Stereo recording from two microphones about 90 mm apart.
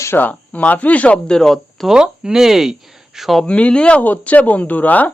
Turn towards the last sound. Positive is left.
turn(degrees=20)  # may be behind; listen again after turning